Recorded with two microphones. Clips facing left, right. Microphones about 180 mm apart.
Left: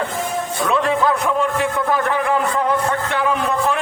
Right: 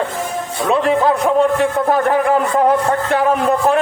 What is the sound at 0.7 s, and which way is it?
A man's voice, 35° right (ahead or behind).